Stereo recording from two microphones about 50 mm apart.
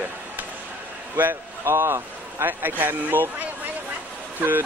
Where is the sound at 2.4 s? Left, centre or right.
Right.